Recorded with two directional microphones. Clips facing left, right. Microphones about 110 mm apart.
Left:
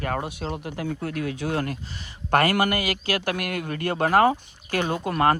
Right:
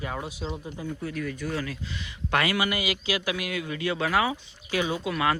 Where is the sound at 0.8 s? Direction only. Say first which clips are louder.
Left 4 dB; 70° left (ahead or behind).